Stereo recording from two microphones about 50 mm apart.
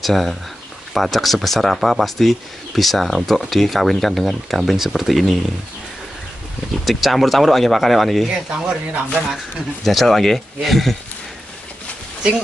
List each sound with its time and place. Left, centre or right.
0.0 s speech: centre
6.8 s speech: centre
8.5 s speech: right
9.8 s speech: centre